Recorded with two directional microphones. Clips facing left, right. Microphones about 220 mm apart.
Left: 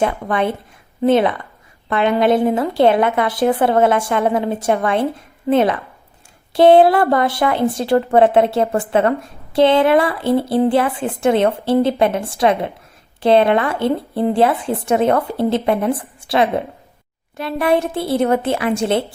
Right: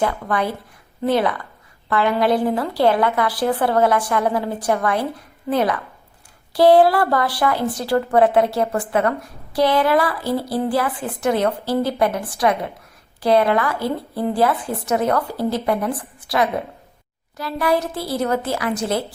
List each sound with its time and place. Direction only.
0.0 s a woman's voice: 25° left (ahead or behind)